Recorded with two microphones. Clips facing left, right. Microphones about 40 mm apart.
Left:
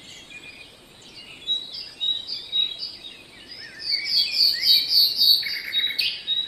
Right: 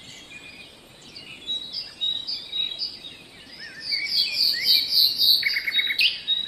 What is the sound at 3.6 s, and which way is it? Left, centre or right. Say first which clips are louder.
Bird vocalization: even; right.